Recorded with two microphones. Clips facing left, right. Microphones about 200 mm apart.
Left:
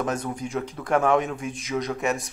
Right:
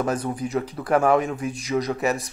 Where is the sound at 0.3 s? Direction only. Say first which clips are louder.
Right 3 dB; 5° right (ahead or behind).